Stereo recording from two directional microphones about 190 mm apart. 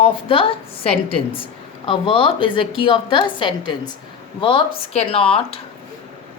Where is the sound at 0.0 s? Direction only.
30° left (ahead or behind).